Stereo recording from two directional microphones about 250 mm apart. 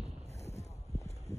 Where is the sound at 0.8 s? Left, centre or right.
Centre.